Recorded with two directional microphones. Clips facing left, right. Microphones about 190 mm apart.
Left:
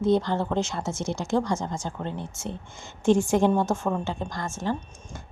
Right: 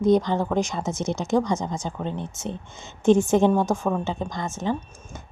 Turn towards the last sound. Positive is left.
turn(degrees=-20)  # may be behind; listen again after turning